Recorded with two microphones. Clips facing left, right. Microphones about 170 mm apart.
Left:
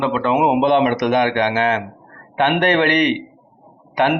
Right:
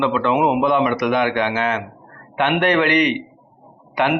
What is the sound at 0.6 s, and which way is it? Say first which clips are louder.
A man's voice: left 2 dB; 65° left (ahead or behind).